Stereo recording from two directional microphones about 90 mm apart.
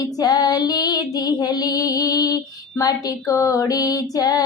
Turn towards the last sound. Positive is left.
turn(degrees=45)  # may be behind; listen again after turning